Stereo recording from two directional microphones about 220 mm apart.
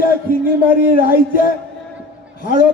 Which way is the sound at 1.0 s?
40° left (ahead or behind).